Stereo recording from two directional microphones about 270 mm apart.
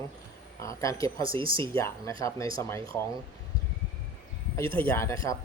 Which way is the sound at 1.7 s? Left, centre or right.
Centre.